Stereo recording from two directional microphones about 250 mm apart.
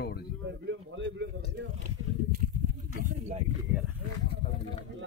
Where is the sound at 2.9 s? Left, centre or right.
Right.